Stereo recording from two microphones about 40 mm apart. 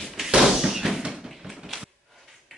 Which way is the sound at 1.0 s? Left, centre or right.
Centre.